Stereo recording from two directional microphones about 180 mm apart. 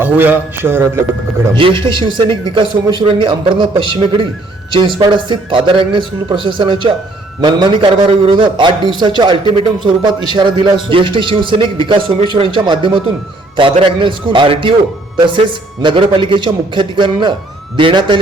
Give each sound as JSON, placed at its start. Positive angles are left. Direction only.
{"t": 0.0, "sound": "a man's voice", "side_deg": -10}
{"t": 1.5, "sound": "a man's voice", "side_deg": -30}
{"t": 15.8, "sound": "a man's voice", "side_deg": -25}